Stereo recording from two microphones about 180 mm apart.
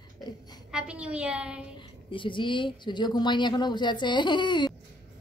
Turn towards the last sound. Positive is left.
turn(degrees=25)  # may be behind; listen again after turning